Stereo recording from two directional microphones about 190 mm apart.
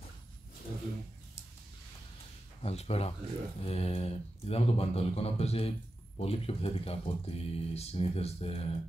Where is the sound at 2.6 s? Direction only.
35° left (ahead or behind).